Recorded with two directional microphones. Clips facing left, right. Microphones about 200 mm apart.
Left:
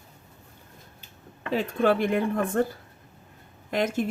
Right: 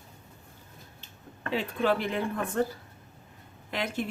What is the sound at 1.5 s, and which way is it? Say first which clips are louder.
Speech: left 4 dB; 45° left (ahead or behind).